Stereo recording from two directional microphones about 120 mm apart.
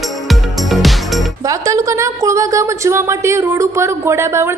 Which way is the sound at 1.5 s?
25° right (ahead or behind).